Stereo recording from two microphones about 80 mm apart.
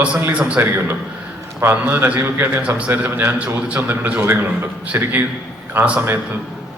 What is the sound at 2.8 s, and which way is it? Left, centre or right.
A man's voice, centre.